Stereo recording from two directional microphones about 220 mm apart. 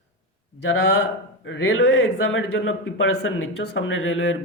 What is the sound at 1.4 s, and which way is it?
A man's voice, 55° left (ahead or behind).